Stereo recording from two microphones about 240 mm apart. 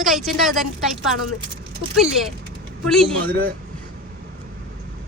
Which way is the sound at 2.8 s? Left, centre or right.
Centre.